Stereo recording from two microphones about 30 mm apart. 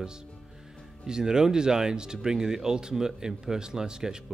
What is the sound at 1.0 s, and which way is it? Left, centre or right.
Speech, right.